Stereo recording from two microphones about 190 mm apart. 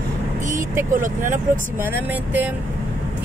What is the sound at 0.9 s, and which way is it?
Speech, 45° right (ahead or behind).